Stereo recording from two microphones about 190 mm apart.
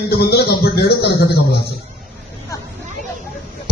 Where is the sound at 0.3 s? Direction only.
55° left (ahead or behind).